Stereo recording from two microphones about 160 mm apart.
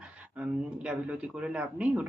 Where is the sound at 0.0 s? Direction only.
5° right (ahead or behind).